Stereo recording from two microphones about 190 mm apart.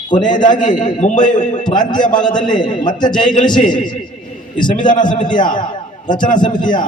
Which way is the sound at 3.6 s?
40° left (ahead or behind).